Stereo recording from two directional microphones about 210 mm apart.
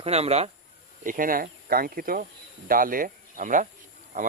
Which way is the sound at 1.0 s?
40° right (ahead or behind).